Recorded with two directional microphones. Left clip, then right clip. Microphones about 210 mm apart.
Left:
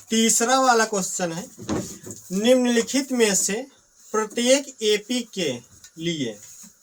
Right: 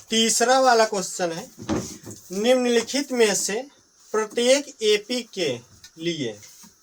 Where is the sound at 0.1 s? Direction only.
Centre (ahead or behind).